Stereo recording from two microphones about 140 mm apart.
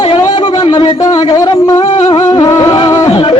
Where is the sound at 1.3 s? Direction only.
25° left (ahead or behind).